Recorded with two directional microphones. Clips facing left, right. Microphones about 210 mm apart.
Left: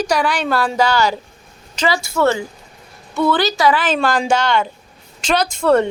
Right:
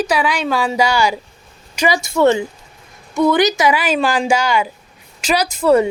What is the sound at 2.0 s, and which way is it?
Speech, 20° right (ahead or behind).